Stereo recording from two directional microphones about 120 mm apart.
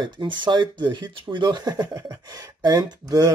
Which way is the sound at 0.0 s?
40° right (ahead or behind).